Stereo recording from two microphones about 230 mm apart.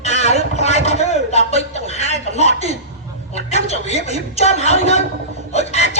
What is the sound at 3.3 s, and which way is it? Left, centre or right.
A woman's voice, left.